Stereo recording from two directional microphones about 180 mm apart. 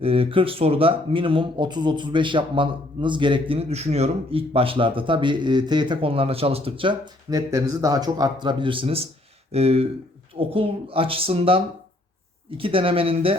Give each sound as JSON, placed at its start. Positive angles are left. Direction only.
{"t": 0.0, "sound": "speech", "side_deg": -30}